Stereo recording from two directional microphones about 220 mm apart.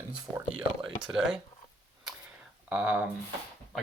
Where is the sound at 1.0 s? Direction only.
5° right (ahead or behind).